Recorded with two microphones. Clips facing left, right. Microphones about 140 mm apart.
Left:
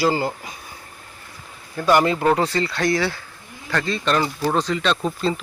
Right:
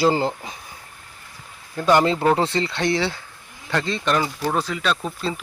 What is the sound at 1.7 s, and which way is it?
Speech, 20° right (ahead or behind).